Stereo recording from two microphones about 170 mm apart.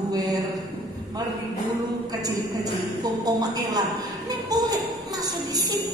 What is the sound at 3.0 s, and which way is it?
A woman's voice, 20° right (ahead or behind).